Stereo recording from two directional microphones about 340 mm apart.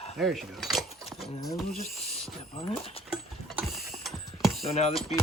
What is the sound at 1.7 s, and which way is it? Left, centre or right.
Speech, left.